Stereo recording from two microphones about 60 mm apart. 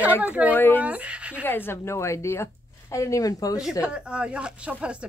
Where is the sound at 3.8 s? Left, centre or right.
Centre.